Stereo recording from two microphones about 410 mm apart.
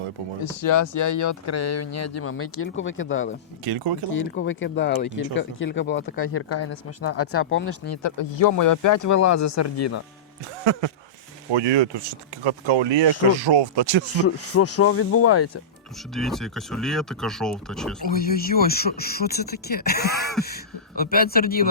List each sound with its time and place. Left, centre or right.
0.5 s speech: left
3.6 s speech: right
4.1 s speech: left
8.2 s speech: left
10.6 s speech: right
13.3 s speech: right
14.2 s speech: left
16.1 s speech: centre
18.1 s speech: left